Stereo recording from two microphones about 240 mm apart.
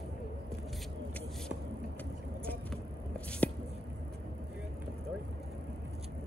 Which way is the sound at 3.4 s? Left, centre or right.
Centre.